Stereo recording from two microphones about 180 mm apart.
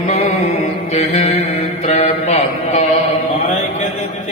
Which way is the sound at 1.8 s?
35° left (ahead or behind).